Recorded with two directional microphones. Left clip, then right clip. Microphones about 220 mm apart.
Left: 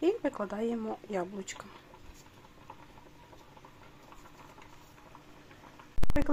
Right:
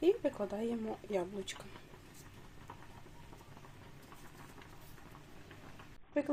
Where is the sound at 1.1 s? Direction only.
40° left (ahead or behind).